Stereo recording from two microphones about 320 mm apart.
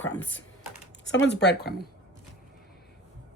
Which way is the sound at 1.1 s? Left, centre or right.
Left.